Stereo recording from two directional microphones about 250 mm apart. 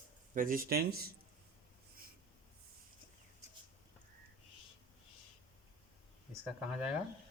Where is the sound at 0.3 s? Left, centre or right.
Right.